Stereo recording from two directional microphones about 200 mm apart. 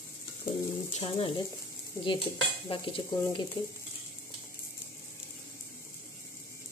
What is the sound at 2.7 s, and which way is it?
Stir, 25° left (ahead or behind).